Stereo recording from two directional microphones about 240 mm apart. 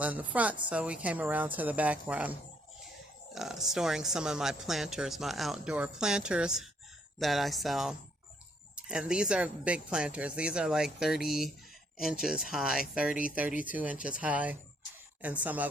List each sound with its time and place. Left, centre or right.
0.0 s speech: centre
3.3 s speech: centre